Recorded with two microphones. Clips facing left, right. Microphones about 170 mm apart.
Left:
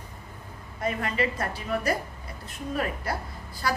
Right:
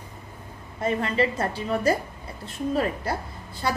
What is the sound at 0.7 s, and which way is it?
A woman's voice, 30° right (ahead or behind).